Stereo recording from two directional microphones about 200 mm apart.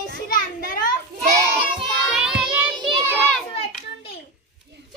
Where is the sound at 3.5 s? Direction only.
30° left (ahead or behind).